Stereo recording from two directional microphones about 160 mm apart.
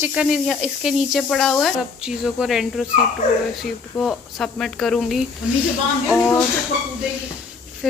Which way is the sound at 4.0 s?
5° left (ahead or behind).